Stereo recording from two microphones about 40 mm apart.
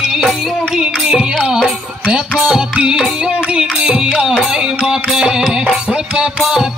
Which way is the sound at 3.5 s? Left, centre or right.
Right.